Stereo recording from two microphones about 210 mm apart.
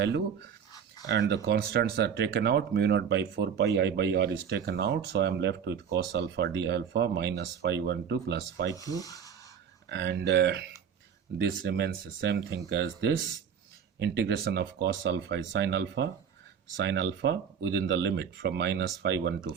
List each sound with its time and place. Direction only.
0.3 s a sound: 20° left (ahead or behind)
1.0 s speech: 55° right (ahead or behind)
8.7 s speech: 15° left (ahead or behind)
9.9 s speech: 55° right (ahead or behind)